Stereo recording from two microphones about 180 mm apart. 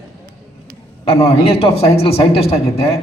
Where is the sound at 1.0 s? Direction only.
35° left (ahead or behind).